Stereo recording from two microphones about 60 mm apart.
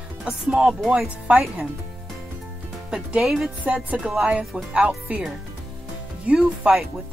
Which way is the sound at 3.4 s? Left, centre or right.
Centre.